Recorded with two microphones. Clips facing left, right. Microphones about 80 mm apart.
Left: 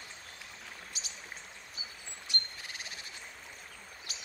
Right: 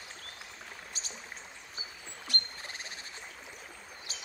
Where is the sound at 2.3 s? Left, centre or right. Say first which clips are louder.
Right 1 dB; centre.